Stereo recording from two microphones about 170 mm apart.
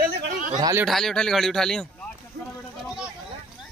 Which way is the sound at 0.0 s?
55° right (ahead or behind).